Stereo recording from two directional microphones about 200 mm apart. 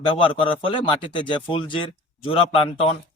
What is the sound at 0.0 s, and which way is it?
A man's voice, 25° left (ahead or behind).